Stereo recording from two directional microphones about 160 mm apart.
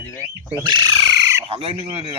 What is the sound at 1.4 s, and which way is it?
Speech, 35° right (ahead or behind).